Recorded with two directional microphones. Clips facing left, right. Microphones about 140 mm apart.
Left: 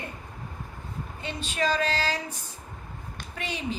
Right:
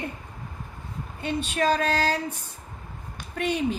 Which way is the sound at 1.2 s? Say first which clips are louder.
Right 4 dB; 55° right (ahead or behind).